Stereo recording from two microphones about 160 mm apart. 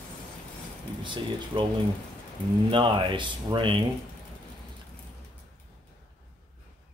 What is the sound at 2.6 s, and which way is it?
Speech, 30° right (ahead or behind).